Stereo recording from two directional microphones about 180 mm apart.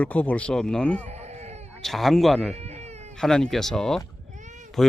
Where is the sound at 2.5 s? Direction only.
35° right (ahead or behind).